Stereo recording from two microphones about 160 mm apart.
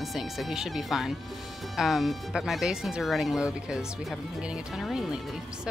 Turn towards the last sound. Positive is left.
turn(degrees=-5)  # may be behind; listen again after turning